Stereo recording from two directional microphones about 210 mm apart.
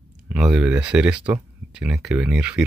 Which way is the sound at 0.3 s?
Centre (ahead or behind).